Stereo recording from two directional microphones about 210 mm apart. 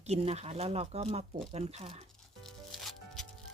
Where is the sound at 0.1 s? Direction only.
30° right (ahead or behind).